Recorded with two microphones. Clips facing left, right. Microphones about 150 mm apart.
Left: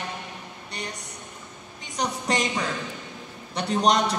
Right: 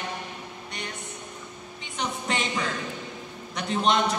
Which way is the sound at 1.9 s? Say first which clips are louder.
Left 3 dB; 40° left (ahead or behind).